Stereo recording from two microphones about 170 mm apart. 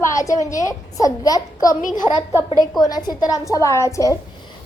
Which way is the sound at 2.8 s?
25° left (ahead or behind).